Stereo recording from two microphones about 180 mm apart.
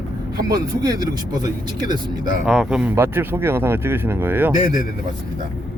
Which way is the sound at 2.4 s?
5° right (ahead or behind).